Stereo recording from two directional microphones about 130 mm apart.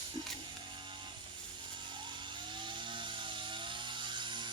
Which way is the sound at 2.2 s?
35° right (ahead or behind).